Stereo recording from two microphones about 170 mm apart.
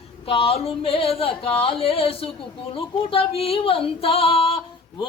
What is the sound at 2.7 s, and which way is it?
Female singing, 35° left (ahead or behind).